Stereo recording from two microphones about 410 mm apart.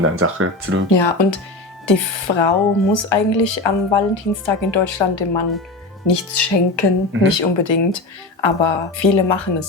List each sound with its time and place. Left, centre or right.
0.0 s speech: right
0.9 s speech: left
6.1 s speech: left
7.3 s speech: left